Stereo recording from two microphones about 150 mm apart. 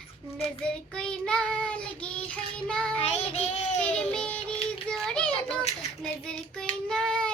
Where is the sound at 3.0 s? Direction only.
45° left (ahead or behind).